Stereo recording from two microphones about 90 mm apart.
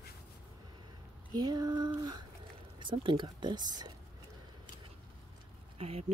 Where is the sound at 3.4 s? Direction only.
55° right (ahead or behind).